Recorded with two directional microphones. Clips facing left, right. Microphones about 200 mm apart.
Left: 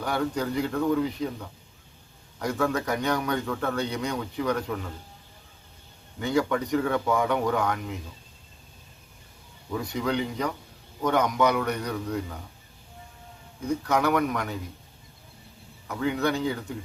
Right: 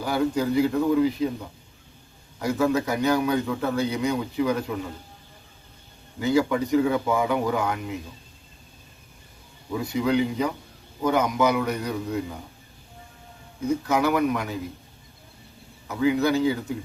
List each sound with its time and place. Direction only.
0.0 s a man's voice: 5° right (ahead or behind)
6.1 s a man's voice: 5° right (ahead or behind)
9.7 s a man's voice: 5° right (ahead or behind)
13.7 s a man's voice: 5° right (ahead or behind)
15.9 s a man's voice: 5° right (ahead or behind)